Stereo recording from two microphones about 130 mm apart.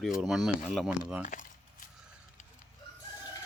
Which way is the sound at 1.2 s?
85° left.